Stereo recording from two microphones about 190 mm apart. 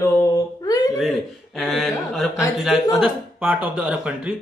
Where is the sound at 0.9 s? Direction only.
Centre (ahead or behind).